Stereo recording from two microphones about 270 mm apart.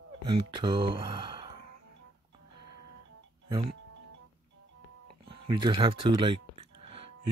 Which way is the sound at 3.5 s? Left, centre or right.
Right.